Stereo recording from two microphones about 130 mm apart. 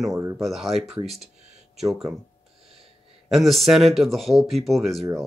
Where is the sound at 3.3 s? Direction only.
Centre (ahead or behind).